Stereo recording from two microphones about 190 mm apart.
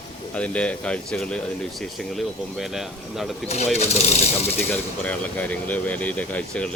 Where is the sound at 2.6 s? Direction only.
Centre (ahead or behind).